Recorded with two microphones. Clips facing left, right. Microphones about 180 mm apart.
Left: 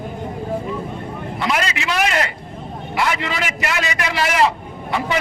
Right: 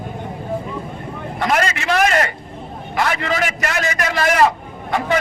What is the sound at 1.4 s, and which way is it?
A man's voice, 50° right (ahead or behind).